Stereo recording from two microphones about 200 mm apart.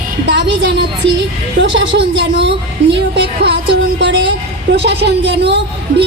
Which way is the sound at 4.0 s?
65° right (ahead or behind).